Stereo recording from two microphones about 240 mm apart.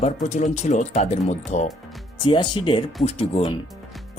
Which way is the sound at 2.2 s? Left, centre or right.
Centre.